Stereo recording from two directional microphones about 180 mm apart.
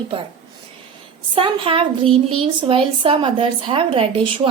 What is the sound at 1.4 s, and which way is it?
A woman's voice, 30° right (ahead or behind).